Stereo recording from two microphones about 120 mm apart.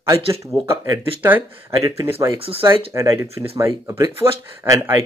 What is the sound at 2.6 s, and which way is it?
Speech, 25° right (ahead or behind).